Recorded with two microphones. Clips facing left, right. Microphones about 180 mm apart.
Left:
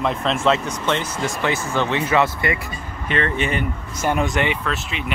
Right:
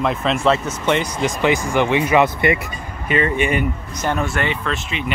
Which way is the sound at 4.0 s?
15° left (ahead or behind).